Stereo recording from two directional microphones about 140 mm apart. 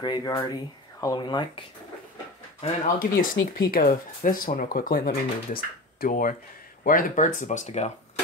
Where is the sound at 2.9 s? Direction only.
80° left.